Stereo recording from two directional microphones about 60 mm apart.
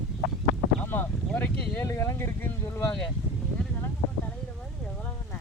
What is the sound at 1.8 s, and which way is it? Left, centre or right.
Speech, left.